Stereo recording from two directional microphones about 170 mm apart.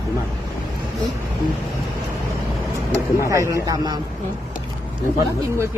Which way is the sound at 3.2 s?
20° right (ahead or behind).